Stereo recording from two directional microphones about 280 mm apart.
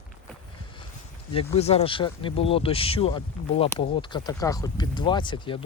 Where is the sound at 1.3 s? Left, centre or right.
Left.